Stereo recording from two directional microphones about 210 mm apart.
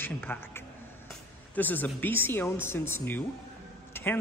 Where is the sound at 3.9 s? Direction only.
10° left (ahead or behind).